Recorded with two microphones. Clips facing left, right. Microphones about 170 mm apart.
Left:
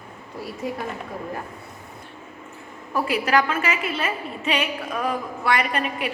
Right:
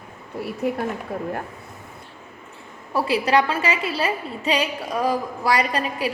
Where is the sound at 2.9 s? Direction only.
30° right (ahead or behind).